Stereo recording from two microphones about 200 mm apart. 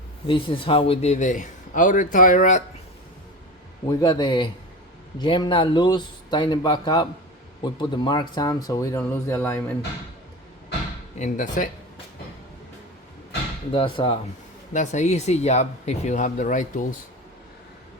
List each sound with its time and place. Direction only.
0.3 s a man's voice: 25° left (ahead or behind)
4.0 s speech: 20° left (ahead or behind)
11.2 s a man's voice: 40° left (ahead or behind)
13.7 s speech: 25° left (ahead or behind)
14.7 s a man's voice: 35° left (ahead or behind)